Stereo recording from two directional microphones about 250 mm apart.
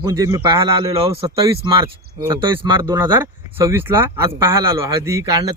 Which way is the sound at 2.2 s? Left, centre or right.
Centre.